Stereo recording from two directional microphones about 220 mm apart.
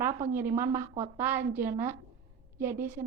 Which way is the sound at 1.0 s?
10° right (ahead or behind).